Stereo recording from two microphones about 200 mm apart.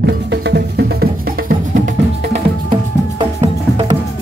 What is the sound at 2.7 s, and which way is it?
Music, 25° right (ahead or behind).